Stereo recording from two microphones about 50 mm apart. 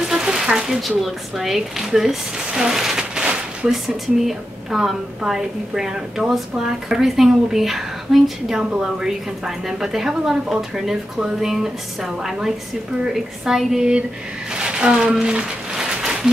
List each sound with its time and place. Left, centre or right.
0.1 s speech: centre
4.3 s a woman's voice: centre
9.7 s a woman's voice: centre
14.5 s a sound: centre